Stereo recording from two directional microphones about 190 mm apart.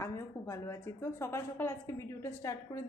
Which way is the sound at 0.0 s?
15° left (ahead or behind).